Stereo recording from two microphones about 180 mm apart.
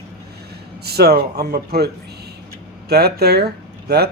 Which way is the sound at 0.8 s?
60° right (ahead or behind).